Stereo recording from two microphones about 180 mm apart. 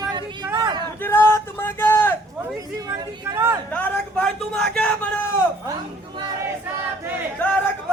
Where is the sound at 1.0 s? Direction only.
10° left (ahead or behind).